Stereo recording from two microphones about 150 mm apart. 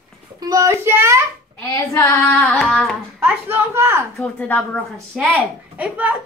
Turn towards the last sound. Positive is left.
turn(degrees=-10)  # may be behind; listen again after turning